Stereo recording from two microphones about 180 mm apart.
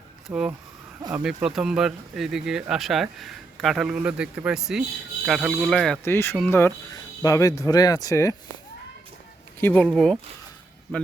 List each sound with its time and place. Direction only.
0.3 s speech: 5° right (ahead or behind)
6.1 s speech: 15° left (ahead or behind)
9.6 s speech: 10° left (ahead or behind)